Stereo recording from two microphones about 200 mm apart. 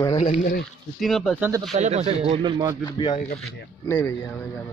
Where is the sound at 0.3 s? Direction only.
45° left (ahead or behind).